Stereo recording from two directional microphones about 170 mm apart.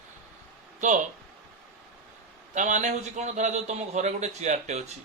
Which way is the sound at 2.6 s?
45° right (ahead or behind).